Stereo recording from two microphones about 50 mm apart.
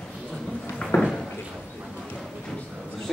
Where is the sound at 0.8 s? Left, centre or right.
Centre.